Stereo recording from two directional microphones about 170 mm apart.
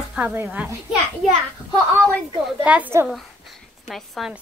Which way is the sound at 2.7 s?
10° right (ahead or behind).